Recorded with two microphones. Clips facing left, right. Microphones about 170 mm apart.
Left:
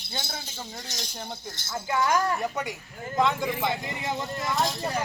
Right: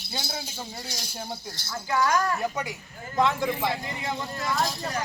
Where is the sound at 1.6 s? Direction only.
25° left (ahead or behind).